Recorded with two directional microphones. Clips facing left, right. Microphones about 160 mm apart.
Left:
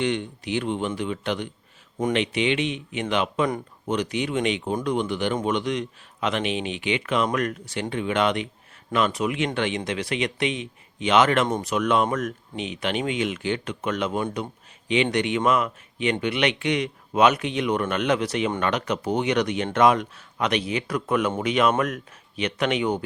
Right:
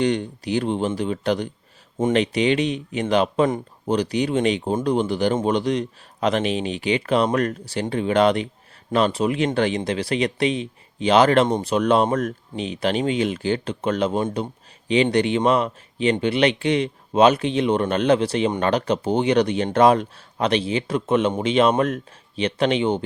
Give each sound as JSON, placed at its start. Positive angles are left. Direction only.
{"t": 0.0, "sound": "speech", "side_deg": -35}
{"t": 15.1, "sound": "speech", "side_deg": -30}